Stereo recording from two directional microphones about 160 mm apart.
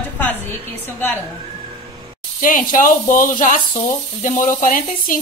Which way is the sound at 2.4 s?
55° left (ahead or behind).